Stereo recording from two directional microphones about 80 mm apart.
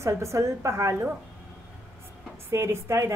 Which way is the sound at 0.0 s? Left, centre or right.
Right.